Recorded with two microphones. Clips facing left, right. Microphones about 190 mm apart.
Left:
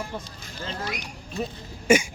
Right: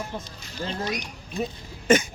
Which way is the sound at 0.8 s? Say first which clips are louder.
Right 3 dB; 20° right (ahead or behind).